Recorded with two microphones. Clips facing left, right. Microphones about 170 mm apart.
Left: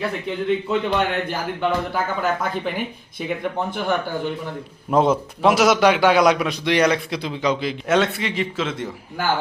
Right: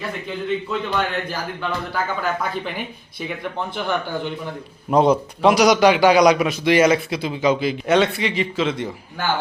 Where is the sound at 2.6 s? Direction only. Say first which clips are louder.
Left 3 dB; 50° left (ahead or behind).